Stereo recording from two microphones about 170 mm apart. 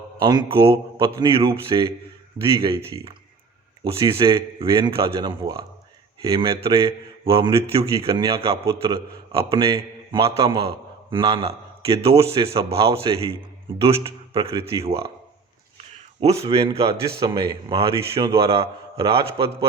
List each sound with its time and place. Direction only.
0.2 s a man's voice: 25° right (ahead or behind)
3.9 s a man's voice: 30° right (ahead or behind)
16.2 s a man's voice: 35° right (ahead or behind)